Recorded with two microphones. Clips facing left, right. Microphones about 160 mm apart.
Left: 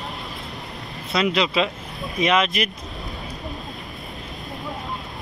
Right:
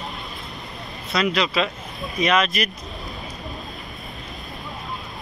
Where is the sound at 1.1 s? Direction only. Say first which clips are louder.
Left 1 dB; 25° left (ahead or behind).